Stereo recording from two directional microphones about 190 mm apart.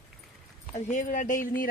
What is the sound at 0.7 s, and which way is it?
Speech, 40° left (ahead or behind).